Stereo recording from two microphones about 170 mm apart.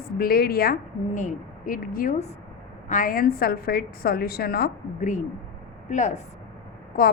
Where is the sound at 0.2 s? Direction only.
60° left (ahead or behind); by 6.2 s 45° left (ahead or behind).